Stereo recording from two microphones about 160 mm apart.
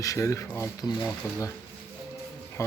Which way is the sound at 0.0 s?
20° left (ahead or behind).